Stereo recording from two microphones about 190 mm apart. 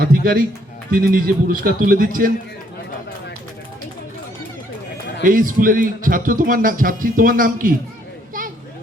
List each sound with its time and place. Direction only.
0.0 s speech: 50° right (ahead or behind)
5.2 s speech: 45° right (ahead or behind)